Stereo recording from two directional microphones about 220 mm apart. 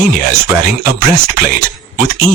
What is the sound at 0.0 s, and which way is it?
Speech, 45° right (ahead or behind).